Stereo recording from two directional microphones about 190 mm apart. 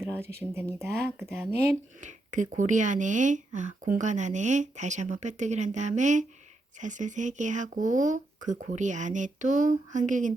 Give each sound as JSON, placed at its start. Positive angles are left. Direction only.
{"t": 0.0, "sound": "speech", "side_deg": -15}
{"t": 2.0, "sound": "speech", "side_deg": -40}